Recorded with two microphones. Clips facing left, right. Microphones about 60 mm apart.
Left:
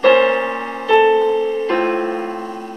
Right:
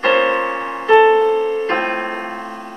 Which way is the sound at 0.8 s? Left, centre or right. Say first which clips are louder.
Right 2 dB; right.